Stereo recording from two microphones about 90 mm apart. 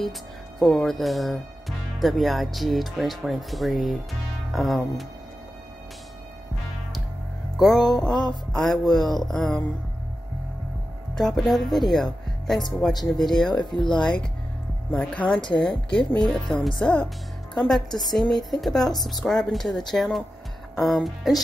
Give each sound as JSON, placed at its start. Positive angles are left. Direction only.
{"t": 0.6, "sound": "speech", "side_deg": 0}
{"t": 7.5, "sound": "speech", "side_deg": 0}
{"t": 8.5, "sound": "mantra", "side_deg": 5}
{"t": 8.9, "sound": "speech", "side_deg": 0}
{"t": 11.1, "sound": "speech", "side_deg": 0}
{"t": 16.8, "sound": "speech", "side_deg": 15}
{"t": 17.6, "sound": "speech", "side_deg": 5}